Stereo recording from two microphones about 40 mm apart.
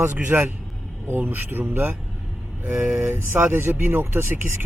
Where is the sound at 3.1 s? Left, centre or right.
Right.